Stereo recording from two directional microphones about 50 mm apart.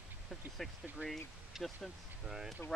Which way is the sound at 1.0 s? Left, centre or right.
Right.